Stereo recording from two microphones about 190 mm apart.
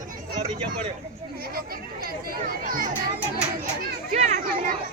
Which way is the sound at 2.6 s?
45° right (ahead or behind).